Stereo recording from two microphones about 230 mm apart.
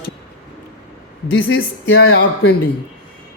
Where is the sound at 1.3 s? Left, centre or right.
Left.